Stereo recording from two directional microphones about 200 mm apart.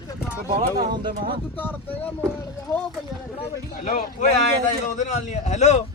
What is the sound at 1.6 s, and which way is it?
Speech, 10° left (ahead or behind).